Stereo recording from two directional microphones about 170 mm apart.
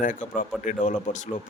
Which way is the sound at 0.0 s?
50° left (ahead or behind).